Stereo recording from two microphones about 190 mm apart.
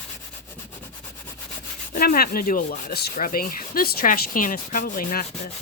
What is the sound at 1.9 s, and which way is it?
Speech, 50° left (ahead or behind).